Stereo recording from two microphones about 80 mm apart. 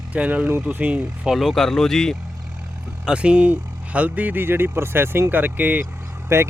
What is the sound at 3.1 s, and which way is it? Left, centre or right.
Speech, centre.